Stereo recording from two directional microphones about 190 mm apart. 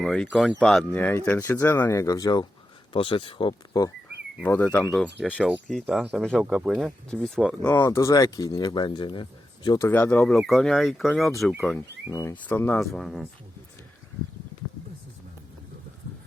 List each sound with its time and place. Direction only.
0.0 s speech: centre (ahead or behind); by 3.9 s 20° left (ahead or behind)
4.4 s speech: 10° left (ahead or behind)